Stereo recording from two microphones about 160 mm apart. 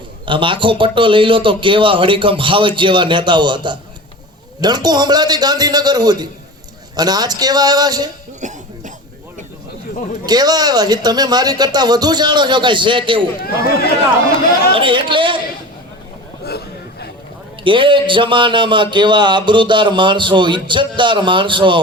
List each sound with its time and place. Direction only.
0.3 s a man's voice: 30° right (ahead or behind)
8.4 s cough: 50° right (ahead or behind)
10.2 s speech: 25° right (ahead or behind)
13.4 s speech: 70° left (ahead or behind)
14.7 s a man's voice: 30° right (ahead or behind)
16.4 s a sound: 80° left
17.6 s a man's voice: 30° right (ahead or behind)